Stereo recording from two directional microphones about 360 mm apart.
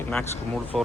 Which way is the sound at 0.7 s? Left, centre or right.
Centre.